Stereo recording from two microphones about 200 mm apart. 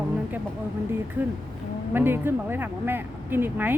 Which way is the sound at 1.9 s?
10° right (ahead or behind).